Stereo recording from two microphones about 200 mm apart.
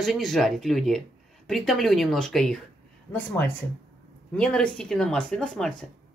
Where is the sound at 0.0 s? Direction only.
Centre (ahead or behind).